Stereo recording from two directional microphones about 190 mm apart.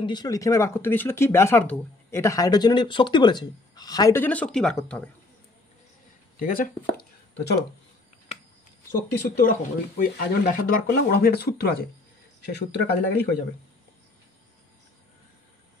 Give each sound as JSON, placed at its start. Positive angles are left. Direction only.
{"t": 0.0, "sound": "speech", "side_deg": 20}
{"t": 6.4, "sound": "speech", "side_deg": 45}
{"t": 9.4, "sound": "speech", "side_deg": 50}